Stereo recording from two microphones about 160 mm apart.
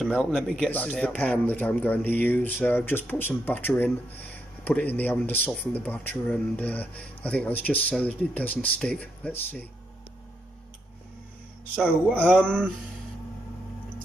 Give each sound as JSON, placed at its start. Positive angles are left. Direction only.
{"t": 0.0, "sound": "a man's voice", "side_deg": -5}
{"t": 11.7, "sound": "a man's voice", "side_deg": 10}